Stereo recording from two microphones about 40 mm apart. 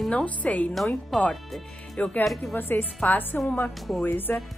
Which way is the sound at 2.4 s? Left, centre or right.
Left.